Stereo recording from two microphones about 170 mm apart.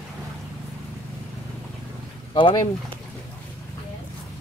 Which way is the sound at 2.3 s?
25° left (ahead or behind).